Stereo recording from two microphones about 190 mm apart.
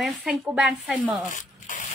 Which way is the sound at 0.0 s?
Centre (ahead or behind).